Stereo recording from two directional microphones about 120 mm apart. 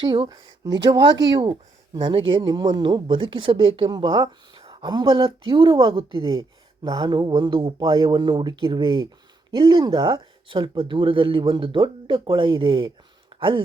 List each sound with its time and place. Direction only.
0.0 s speech: 45° right (ahead or behind)
3.8 s speech: 35° right (ahead or behind)